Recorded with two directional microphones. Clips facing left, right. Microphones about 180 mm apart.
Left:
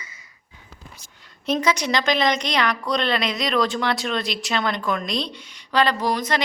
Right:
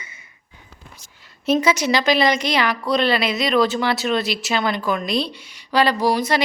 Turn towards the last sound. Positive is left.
turn(degrees=-10)  # may be behind; listen again after turning